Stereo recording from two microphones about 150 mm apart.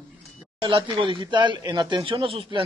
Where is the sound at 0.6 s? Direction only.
35° right (ahead or behind).